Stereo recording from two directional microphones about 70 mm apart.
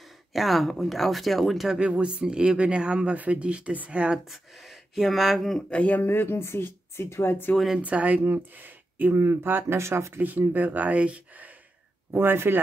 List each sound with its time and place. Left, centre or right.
0.3 s speech: centre
1.8 s speech: centre
4.3 s speech: centre
5.7 s speech: centre
6.0 s speech: left
7.5 s speech: centre
7.8 s speech: right
10.2 s speech: right
12.1 s speech: right